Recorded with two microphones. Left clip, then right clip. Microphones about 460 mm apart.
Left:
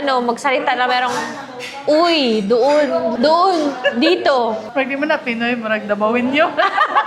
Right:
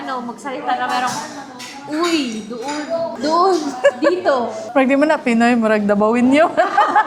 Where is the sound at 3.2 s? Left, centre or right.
Centre.